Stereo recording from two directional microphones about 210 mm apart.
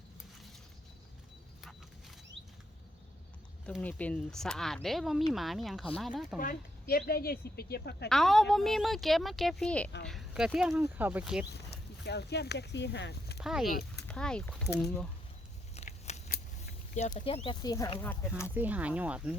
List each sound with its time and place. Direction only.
3.7 s speech: 5° left (ahead or behind)
6.4 s speech: 45° left (ahead or behind)
8.1 s speech: centre (ahead or behind)
12.0 s speech: 50° left (ahead or behind)
13.4 s speech: centre (ahead or behind)
13.7 s speech: 45° left (ahead or behind)
14.1 s speech: 5° left (ahead or behind)
15.7 s scissors: 30° left (ahead or behind)
16.9 s speech: 35° left (ahead or behind); by 18.0 s 20° left (ahead or behind)
18.5 s speech: 10° right (ahead or behind)